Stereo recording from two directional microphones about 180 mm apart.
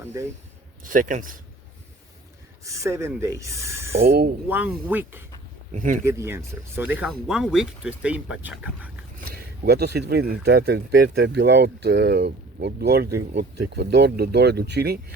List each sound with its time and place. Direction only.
0.0 s speech: 15° right (ahead or behind)
0.9 s a man's voice: 45° right (ahead or behind)
2.6 s speech: 15° right (ahead or behind)
4.0 s speech: 60° right (ahead or behind)
4.4 s speech: 10° right (ahead or behind)
5.7 s a man's voice: 45° right (ahead or behind)
6.1 s speech: 15° right (ahead or behind)
9.6 s speech: 65° right (ahead or behind)